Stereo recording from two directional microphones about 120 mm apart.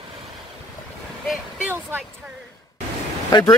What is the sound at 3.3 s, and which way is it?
Speech, 35° left (ahead or behind).